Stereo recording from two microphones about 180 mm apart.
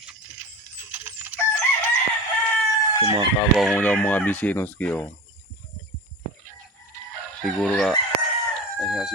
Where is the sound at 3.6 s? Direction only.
5° left (ahead or behind).